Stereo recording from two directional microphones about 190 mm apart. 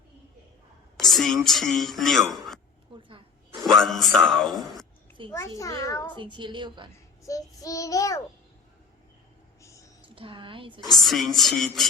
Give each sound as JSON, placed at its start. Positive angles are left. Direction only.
{"t": 0.9, "sound": "speech", "side_deg": 0}
{"t": 2.9, "sound": "a sound", "side_deg": -25}
{"t": 3.5, "sound": "speech", "side_deg": 0}
{"t": 5.3, "sound": "child singing", "side_deg": 15}
{"t": 6.1, "sound": "a woman's voice", "side_deg": -25}
{"t": 7.3, "sound": "child singing", "side_deg": 20}
{"t": 9.6, "sound": "a sound", "side_deg": 15}
{"t": 10.2, "sound": "a woman's voice", "side_deg": -25}
{"t": 11.0, "sound": "music", "side_deg": 0}